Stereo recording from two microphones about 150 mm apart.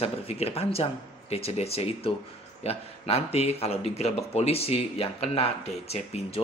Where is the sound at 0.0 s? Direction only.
45° left (ahead or behind).